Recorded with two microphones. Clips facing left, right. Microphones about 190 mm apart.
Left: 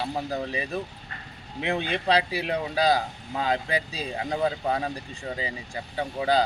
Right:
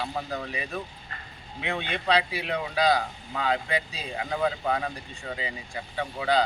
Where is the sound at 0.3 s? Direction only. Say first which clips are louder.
Left 4 dB; 30° left (ahead or behind).